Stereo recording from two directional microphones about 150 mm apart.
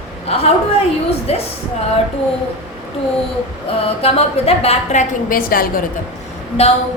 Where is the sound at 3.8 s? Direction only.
45° left (ahead or behind).